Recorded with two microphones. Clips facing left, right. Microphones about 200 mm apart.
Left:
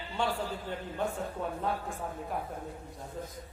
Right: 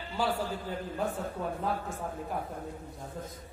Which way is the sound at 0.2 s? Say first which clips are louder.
Right 1 dB; 5° right (ahead or behind).